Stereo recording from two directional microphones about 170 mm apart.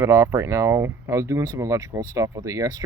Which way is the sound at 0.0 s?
15° right (ahead or behind).